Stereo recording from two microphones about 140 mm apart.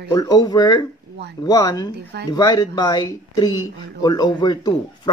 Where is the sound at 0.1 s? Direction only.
25° left (ahead or behind).